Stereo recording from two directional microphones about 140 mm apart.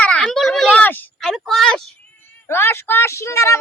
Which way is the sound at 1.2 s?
5° left (ahead or behind).